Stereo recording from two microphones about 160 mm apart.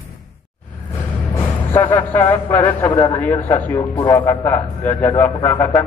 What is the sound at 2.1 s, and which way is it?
Speech, 10° left (ahead or behind).